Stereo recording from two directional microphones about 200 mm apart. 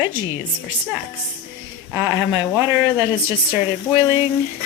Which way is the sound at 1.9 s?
10° right (ahead or behind).